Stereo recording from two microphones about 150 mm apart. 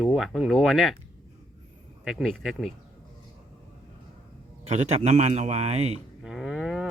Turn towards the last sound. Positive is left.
turn(degrees=0)  # may be behind; listen again after turning